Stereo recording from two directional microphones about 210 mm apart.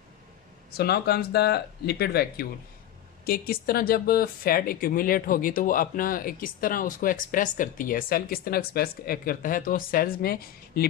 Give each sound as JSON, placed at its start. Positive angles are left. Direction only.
{"t": 0.7, "sound": "speech", "side_deg": 50}